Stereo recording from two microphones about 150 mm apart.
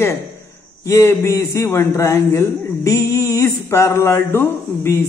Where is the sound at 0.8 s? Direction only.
20° left (ahead or behind).